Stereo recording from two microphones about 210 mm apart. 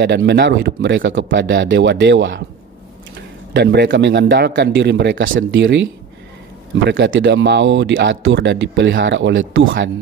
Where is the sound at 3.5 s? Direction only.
50° right (ahead or behind).